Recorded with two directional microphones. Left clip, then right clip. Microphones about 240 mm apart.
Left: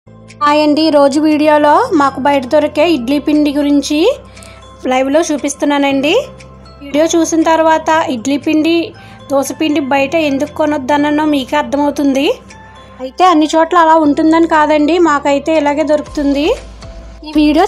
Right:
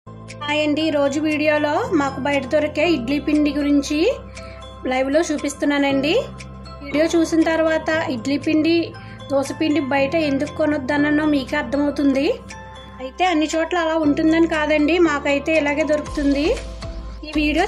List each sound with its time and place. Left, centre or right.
0.5 s speech: centre
13.0 s speech: centre